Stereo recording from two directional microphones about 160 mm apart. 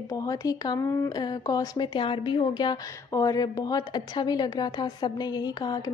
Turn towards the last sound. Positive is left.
turn(degrees=25)  # may be behind; listen again after turning